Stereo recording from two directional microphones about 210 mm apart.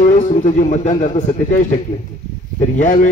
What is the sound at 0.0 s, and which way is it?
A man's voice, 35° left (ahead or behind).